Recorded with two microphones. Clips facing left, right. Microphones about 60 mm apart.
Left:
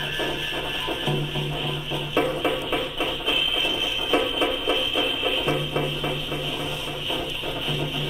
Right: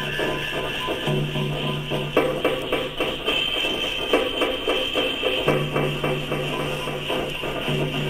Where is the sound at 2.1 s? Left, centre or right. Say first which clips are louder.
Right 2 dB; centre.